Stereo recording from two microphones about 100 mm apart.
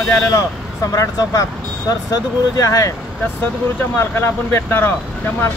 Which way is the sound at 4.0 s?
25° left (ahead or behind).